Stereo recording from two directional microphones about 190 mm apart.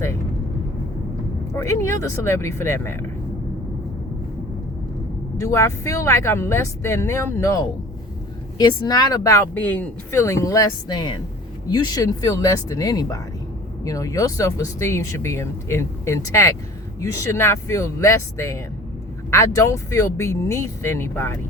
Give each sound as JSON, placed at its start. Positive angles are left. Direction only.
{"t": 1.5, "sound": "speech", "side_deg": 15}
{"t": 5.4, "sound": "speech", "side_deg": 15}